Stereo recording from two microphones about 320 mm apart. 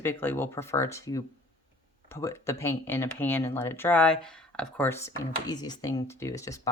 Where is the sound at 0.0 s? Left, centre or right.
Centre.